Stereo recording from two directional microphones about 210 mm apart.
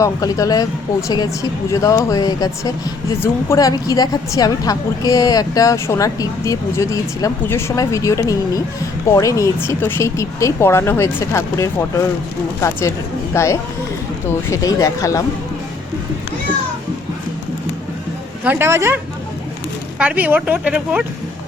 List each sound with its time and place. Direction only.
0.0 s a woman's voice: 15° left (ahead or behind)
18.4 s speech: 10° right (ahead or behind)
20.0 s speech: 5° right (ahead or behind)